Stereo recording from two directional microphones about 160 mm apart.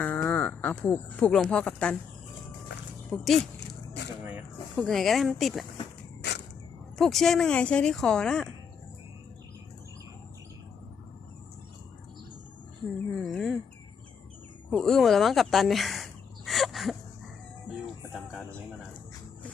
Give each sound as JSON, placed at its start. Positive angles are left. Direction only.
{"t": 0.0, "sound": "speech", "side_deg": 10}
{"t": 3.1, "sound": "speech", "side_deg": 0}
{"t": 6.2, "sound": "a sound", "side_deg": 90}
{"t": 7.0, "sound": "speech", "side_deg": 0}
{"t": 13.1, "sound": "speech", "side_deg": 0}
{"t": 14.7, "sound": "speech", "side_deg": 0}
{"t": 16.5, "sound": "a sound", "side_deg": 0}
{"t": 17.8, "sound": "music", "side_deg": 0}